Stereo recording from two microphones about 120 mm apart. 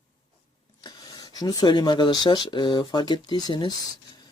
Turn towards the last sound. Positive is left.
turn(degrees=40)  # may be behind; listen again after turning